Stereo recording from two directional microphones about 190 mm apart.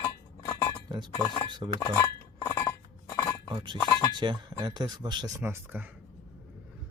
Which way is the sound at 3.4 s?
25° right (ahead or behind).